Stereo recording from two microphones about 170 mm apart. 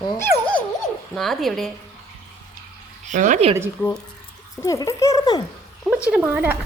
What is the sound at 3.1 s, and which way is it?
Speech, 50° right (ahead or behind).